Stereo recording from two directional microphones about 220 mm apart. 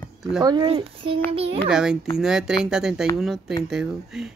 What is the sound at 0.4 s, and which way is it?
A child's voice, 20° right (ahead or behind).